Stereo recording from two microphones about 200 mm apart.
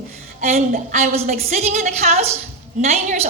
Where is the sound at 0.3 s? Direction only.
35° right (ahead or behind).